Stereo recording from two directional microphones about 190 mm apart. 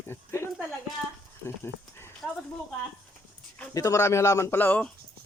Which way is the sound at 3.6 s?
15° left (ahead or behind).